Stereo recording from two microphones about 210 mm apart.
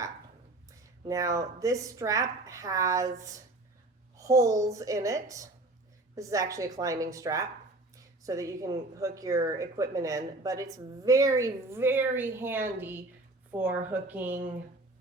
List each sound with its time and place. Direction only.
1.0 s a woman's voice: 15° right (ahead or behind)